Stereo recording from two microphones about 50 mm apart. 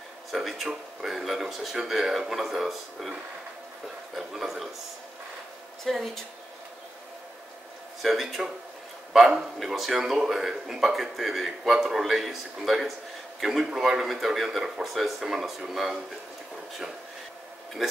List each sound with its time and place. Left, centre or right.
0.3 s speech: centre
4.2 s speech: centre
5.9 s speech: centre
8.0 s speech: centre